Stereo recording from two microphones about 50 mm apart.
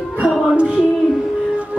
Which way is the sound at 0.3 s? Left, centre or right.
Centre.